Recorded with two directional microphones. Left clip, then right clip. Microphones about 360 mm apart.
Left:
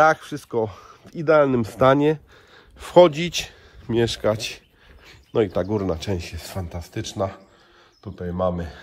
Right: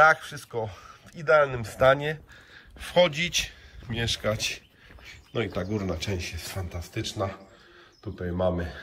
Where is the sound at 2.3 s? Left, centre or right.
Centre.